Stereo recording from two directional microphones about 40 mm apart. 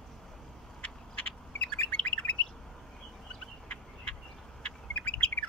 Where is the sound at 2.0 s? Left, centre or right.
Left.